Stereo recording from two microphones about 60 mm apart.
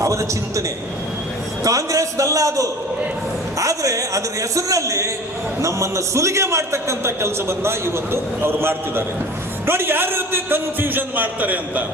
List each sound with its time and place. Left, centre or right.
0.0 s a man's voice: right
1.6 s a man's voice: right